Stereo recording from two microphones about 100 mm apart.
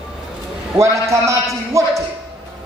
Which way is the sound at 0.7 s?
30° right (ahead or behind).